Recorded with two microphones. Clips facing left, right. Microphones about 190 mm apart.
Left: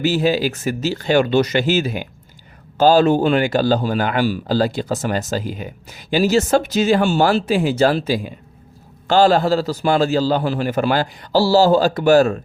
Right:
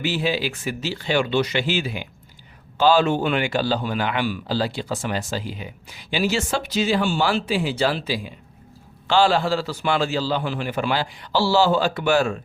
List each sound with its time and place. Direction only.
0.0 s a man's voice: 40° left (ahead or behind)